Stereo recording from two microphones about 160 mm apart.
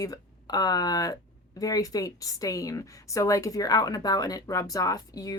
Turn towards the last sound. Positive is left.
turn(degrees=20)  # may be behind; listen again after turning